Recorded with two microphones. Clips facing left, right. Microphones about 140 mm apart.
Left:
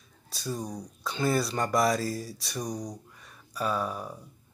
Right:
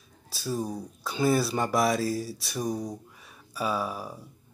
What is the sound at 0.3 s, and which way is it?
Speech, 5° right (ahead or behind).